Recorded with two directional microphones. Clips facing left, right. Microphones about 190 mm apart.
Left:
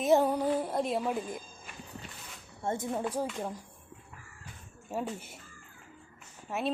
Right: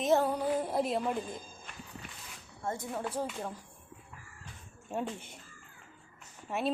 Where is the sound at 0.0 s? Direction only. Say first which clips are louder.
Left 3 dB; 10° left (ahead or behind).